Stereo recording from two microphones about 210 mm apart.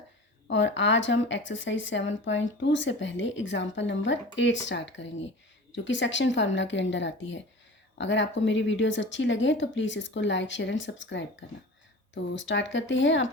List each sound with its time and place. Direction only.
0.4 s speech: 60° left (ahead or behind)